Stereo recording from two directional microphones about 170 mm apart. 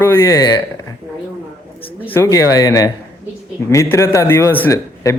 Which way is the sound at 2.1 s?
20° left (ahead or behind).